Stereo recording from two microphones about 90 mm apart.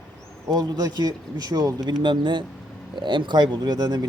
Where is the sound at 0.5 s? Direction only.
50° right (ahead or behind).